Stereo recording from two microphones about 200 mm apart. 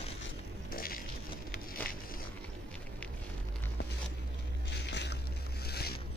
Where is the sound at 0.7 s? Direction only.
45° left (ahead or behind).